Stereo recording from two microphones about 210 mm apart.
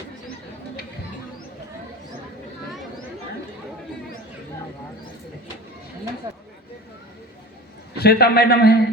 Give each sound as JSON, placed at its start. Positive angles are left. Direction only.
{"t": 7.9, "sound": "a man's voice", "side_deg": 50}